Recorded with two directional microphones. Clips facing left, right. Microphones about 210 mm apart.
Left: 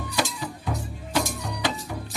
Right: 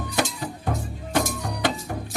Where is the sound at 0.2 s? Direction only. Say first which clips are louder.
Right 2 dB; 50° right (ahead or behind).